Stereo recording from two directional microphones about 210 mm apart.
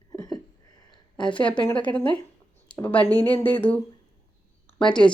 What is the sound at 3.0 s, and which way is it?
Speech, 20° right (ahead or behind).